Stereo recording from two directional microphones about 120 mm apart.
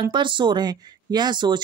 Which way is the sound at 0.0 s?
40° right (ahead or behind).